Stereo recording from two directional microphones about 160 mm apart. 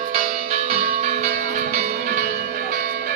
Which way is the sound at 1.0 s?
45° right (ahead or behind).